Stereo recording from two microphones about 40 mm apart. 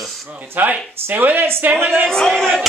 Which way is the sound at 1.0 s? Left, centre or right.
Right.